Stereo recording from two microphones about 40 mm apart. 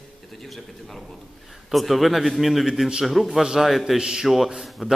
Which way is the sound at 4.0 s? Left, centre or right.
Centre.